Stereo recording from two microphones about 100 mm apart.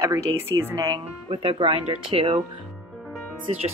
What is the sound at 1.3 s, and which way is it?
Speech, 65° right (ahead or behind).